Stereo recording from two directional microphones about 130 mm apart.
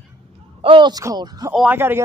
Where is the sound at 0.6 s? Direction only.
40° right (ahead or behind).